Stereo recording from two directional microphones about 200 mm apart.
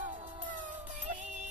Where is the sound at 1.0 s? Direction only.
35° right (ahead or behind).